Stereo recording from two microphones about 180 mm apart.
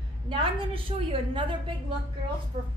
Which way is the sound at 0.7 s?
30° right (ahead or behind).